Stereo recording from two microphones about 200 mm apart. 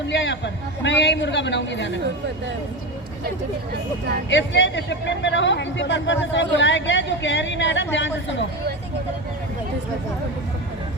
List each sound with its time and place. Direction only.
0.1 s speech: 65° left (ahead or behind)
4.3 s speech: 65° left (ahead or behind)